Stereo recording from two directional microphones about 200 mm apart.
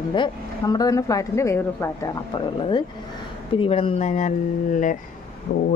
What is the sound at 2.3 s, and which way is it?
Speech, 25° left (ahead or behind).